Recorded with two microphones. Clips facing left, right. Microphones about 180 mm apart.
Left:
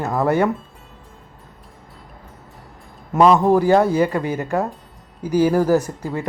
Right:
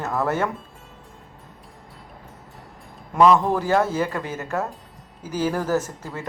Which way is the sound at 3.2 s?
20° left (ahead or behind).